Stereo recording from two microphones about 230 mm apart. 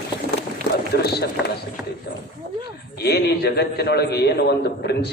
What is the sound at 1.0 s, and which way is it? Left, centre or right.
Speech, left.